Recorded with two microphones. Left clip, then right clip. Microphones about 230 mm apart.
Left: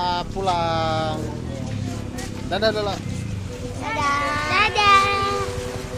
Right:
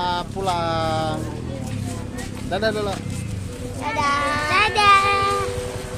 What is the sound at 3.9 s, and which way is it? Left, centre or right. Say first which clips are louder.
Child singing: right 1 dB; right.